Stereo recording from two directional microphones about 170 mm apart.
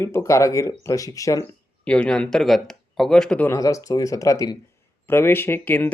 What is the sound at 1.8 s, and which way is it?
Speech, 5° left (ahead or behind).